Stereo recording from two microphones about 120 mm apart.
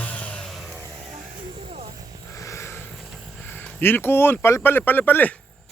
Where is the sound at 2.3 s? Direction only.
25° left (ahead or behind).